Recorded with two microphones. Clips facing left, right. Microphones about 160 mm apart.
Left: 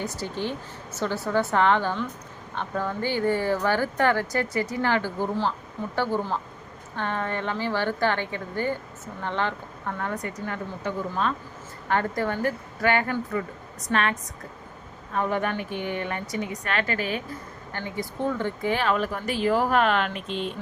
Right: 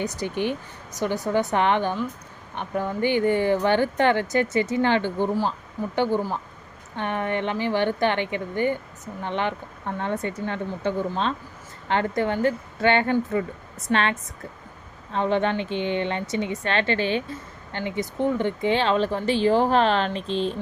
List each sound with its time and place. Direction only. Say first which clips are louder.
0.0 s a woman's voice: right 4 dB; 20° right (ahead or behind)